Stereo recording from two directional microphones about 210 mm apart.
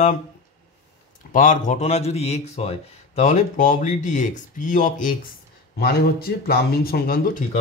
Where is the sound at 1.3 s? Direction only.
40° left (ahead or behind).